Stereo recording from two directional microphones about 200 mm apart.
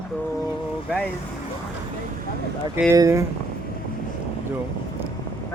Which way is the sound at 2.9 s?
15° right (ahead or behind).